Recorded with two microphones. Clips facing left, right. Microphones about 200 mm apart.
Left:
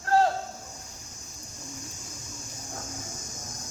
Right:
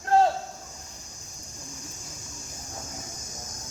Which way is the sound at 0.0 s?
20° right (ahead or behind).